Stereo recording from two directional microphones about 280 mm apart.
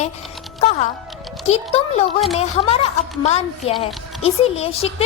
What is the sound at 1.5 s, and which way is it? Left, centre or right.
A woman's voice, left.